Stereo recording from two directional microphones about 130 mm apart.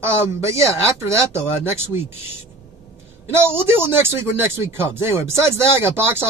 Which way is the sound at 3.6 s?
15° right (ahead or behind).